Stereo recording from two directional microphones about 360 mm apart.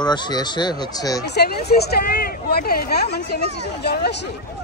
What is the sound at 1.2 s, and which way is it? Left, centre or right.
Speech, left.